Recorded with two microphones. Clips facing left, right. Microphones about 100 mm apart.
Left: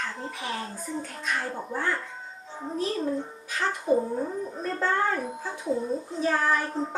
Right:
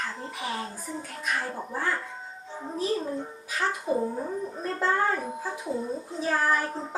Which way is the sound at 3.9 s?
30° left (ahead or behind).